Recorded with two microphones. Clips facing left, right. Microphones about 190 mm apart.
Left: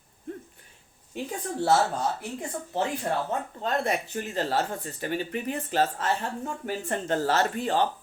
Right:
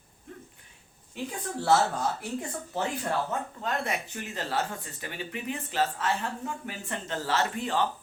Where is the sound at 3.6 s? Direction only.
35° left (ahead or behind).